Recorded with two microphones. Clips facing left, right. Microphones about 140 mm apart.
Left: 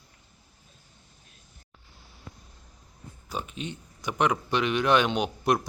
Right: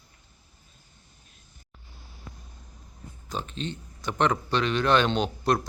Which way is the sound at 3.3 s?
10° left (ahead or behind).